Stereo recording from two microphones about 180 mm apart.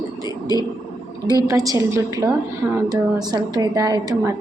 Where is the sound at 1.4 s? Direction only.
20° right (ahead or behind).